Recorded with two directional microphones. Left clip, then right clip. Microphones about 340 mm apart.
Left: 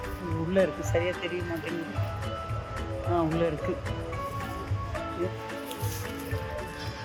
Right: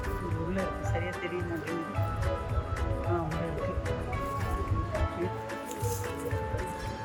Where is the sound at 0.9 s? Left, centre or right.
Centre.